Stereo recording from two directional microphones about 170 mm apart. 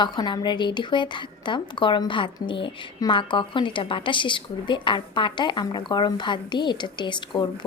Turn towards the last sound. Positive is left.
turn(degrees=25)  # may be behind; listen again after turning